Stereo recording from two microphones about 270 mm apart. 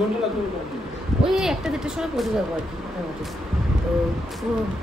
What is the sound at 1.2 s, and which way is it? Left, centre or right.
Speech, centre.